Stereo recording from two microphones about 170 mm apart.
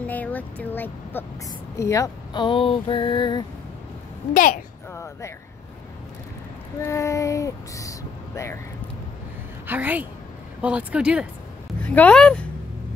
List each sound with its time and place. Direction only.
0.0 s speech: 10° left (ahead or behind); by 3.4 s 25° left (ahead or behind)
4.3 s a child's voice: 50° left (ahead or behind)
4.9 s a sound: 15° left (ahead or behind)
6.8 s female singing: 15° left (ahead or behind)
9.7 s speech: 10° right (ahead or behind)
11.8 s speech: 10° left (ahead or behind)